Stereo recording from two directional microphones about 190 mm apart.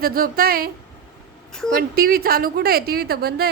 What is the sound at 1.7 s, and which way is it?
A woman's voice, 50° right (ahead or behind).